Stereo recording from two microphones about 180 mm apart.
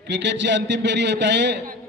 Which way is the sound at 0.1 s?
75° right (ahead or behind).